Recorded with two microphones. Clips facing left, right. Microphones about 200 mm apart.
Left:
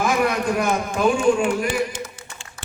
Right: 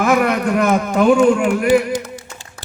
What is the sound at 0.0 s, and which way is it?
A man's voice, 65° right (ahead or behind).